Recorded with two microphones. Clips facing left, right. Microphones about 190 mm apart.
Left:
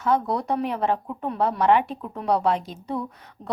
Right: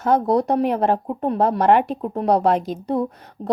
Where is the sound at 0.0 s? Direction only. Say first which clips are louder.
Right 6 dB; 40° right (ahead or behind).